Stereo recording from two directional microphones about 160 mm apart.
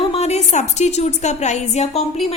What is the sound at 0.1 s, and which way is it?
A woman's voice, 40° left (ahead or behind).